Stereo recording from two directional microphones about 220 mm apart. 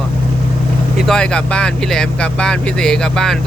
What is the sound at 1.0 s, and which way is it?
Speech, 5° left (ahead or behind).